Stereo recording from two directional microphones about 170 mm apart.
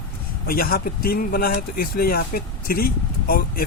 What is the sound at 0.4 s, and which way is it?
Speech, 60° left (ahead or behind).